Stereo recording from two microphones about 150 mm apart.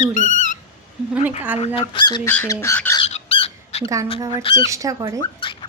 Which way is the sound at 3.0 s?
40° left (ahead or behind).